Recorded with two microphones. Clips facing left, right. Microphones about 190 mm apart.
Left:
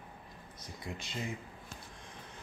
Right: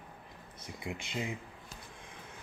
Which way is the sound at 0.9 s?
15° right (ahead or behind).